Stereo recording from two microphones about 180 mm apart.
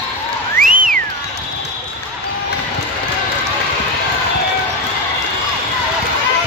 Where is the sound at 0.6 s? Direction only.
50° right (ahead or behind).